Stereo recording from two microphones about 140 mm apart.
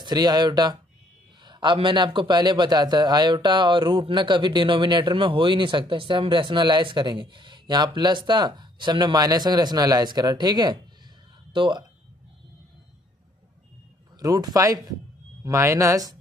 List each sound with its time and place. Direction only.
0.0 s a man's voice: 30° right (ahead or behind)
14.2 s speech: 25° right (ahead or behind)